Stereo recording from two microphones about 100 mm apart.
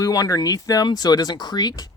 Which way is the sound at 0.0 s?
35° left (ahead or behind).